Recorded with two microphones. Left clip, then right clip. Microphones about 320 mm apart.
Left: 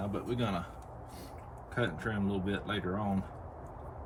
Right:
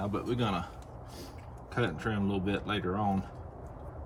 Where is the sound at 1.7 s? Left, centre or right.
Centre.